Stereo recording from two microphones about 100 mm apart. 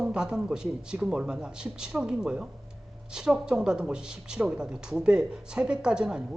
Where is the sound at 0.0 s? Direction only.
10° right (ahead or behind).